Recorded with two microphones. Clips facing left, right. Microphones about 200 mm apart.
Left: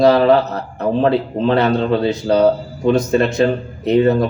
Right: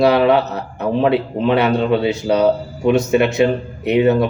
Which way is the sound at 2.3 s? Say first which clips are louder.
Left 2 dB; 30° left (ahead or behind).